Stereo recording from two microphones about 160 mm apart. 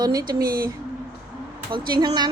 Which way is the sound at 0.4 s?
65° right (ahead or behind).